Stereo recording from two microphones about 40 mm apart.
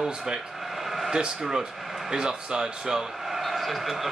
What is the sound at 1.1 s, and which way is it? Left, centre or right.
A man's voice, centre.